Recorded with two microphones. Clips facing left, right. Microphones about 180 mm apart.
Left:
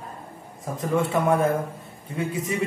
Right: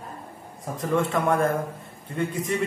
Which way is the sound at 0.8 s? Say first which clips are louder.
Left 1 dB; 5° left (ahead or behind).